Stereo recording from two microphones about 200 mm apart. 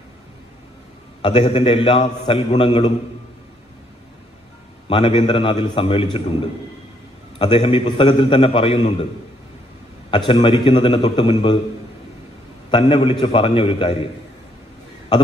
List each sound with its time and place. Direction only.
1.2 s a man's voice: 30° left (ahead or behind)
4.8 s a man's voice: 25° left (ahead or behind)
7.3 s a man's voice: 25° left (ahead or behind)
10.1 s a man's voice: 25° left (ahead or behind)
12.7 s a man's voice: 25° left (ahead or behind)